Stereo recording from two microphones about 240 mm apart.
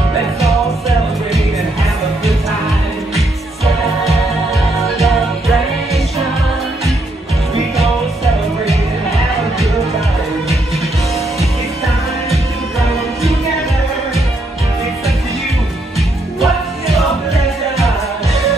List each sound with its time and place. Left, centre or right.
4.9 s music: centre
16.3 s music: centre